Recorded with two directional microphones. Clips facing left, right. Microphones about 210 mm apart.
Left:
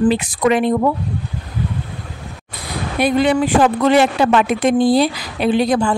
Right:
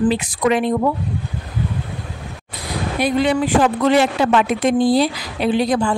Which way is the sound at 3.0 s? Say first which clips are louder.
Left 3 dB; 60° left (ahead or behind).